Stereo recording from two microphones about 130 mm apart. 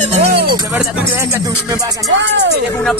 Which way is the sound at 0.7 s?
10° right (ahead or behind).